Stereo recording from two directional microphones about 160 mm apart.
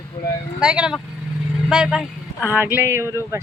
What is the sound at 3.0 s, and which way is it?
Speech, 15° left (ahead or behind).